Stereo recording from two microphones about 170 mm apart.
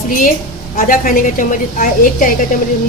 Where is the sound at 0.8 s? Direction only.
55° left (ahead or behind).